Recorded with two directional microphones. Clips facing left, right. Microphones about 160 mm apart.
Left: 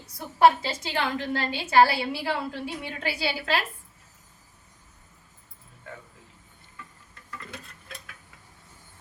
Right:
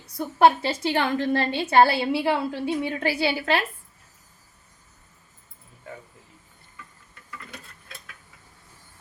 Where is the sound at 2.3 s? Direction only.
60° right (ahead or behind).